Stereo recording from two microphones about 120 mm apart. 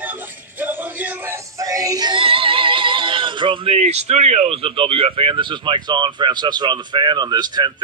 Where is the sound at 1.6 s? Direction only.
30° right (ahead or behind).